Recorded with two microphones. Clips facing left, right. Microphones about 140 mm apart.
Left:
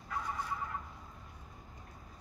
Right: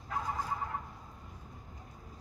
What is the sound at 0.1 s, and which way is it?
Fowl, 45° right (ahead or behind).